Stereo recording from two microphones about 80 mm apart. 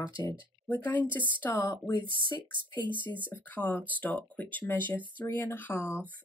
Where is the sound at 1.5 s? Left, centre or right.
Left.